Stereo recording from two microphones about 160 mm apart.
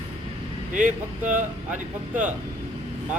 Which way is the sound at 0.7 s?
55° right (ahead or behind).